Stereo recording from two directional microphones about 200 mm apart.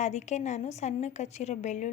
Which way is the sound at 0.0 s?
35° left (ahead or behind).